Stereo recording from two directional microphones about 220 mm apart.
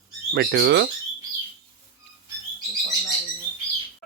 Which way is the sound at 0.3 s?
50° right (ahead or behind).